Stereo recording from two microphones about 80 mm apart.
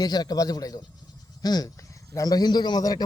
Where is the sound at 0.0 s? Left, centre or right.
Left.